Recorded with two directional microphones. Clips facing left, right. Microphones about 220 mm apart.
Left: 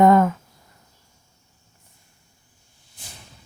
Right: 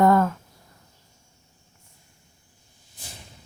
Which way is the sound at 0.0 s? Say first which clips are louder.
Left 3 dB; 20° left (ahead or behind).